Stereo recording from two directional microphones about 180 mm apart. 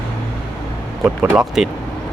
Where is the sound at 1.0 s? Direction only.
10° right (ahead or behind).